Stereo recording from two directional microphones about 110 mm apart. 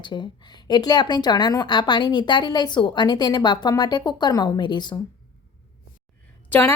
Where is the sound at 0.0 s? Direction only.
45° left (ahead or behind).